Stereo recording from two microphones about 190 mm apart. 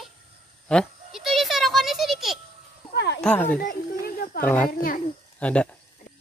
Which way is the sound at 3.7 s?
50° left (ahead or behind).